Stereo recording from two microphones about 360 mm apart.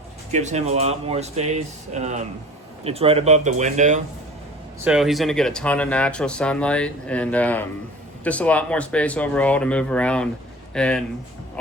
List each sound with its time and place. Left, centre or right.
0.3 s speech: centre
4.8 s speech: centre